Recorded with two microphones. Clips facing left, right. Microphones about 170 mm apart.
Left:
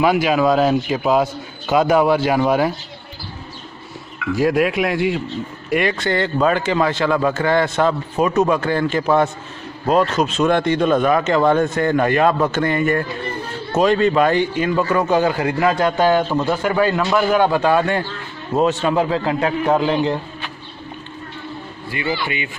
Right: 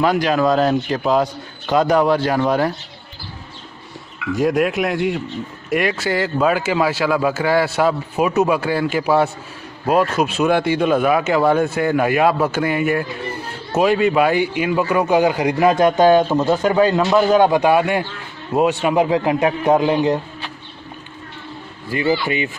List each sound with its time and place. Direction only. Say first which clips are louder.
0.0 s a man's voice: left 1 dB; 5° left (ahead or behind)
4.4 s a man's voice: even; centre (ahead or behind); by 20.2 s 15° right (ahead or behind)
21.8 s a man's voice: right 5 dB; 40° right (ahead or behind)